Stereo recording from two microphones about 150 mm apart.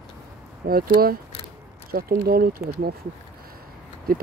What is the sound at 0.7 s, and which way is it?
Speech, 80° right.